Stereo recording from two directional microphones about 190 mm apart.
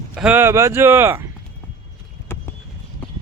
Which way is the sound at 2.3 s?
10° left (ahead or behind).